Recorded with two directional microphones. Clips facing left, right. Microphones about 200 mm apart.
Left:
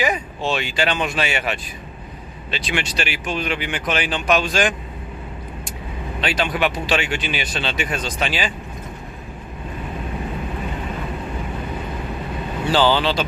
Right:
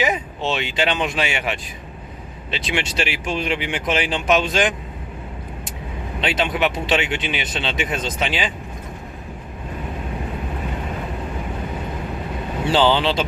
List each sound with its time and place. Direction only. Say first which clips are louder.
0.0 s speech: even; 20° right (ahead or behind)
6.1 s speech: right 1 dB; 25° right (ahead or behind)
12.6 s speech: even; 25° right (ahead or behind)